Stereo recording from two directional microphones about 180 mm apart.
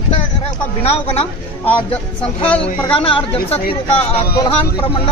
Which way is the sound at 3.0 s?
30° left (ahead or behind).